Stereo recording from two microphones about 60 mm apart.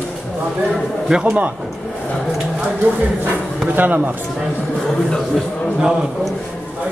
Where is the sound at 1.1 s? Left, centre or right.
Centre.